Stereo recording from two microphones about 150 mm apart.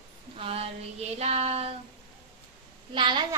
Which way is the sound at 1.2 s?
45° right (ahead or behind).